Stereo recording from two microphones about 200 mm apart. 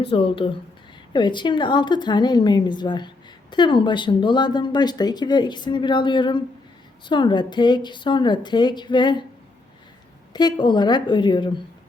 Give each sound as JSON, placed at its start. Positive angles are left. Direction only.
{"t": 0.0, "sound": "speech", "side_deg": 25}
{"t": 10.3, "sound": "speech", "side_deg": 20}